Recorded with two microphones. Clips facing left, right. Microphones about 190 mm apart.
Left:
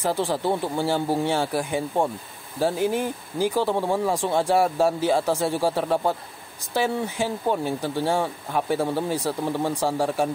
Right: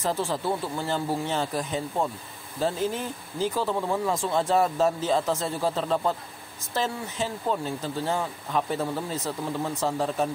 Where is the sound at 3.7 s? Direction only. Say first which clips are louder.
Left 3 dB; 30° left (ahead or behind).